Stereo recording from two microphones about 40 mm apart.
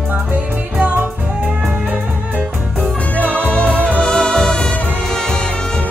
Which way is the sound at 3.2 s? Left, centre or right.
Left.